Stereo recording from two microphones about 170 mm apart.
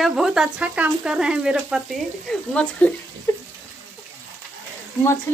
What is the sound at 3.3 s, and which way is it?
Water, 20° left (ahead or behind).